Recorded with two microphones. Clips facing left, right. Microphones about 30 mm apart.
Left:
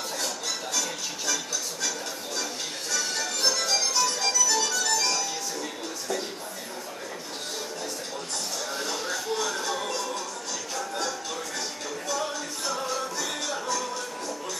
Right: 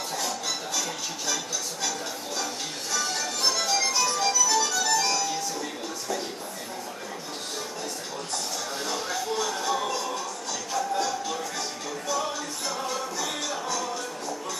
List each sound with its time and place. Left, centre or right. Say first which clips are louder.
0.2 s music: right 1 dB; centre
8.7 s a sound: right 1 dB; centre
10.7 s music: right 5 dB; centre